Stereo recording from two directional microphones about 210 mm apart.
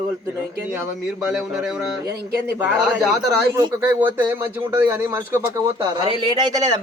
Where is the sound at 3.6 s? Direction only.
10° right (ahead or behind).